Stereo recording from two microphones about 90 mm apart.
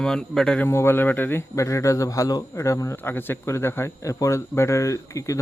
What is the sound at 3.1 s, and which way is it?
Speech, 25° left (ahead or behind).